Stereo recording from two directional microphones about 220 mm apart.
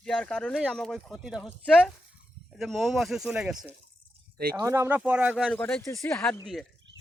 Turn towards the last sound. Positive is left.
turn(degrees=10)  # may be behind; listen again after turning